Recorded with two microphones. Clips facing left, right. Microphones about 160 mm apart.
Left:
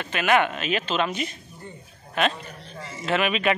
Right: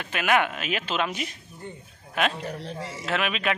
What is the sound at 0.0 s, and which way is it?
Speech, 5° right (ahead or behind).